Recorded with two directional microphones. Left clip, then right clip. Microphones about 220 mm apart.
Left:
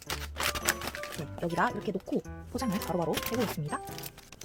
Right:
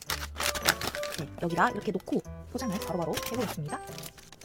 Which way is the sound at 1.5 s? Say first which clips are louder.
Right 3 dB; 15° right (ahead or behind).